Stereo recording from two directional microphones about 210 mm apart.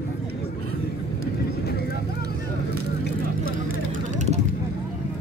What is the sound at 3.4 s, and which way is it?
Vehicle, 40° right (ahead or behind).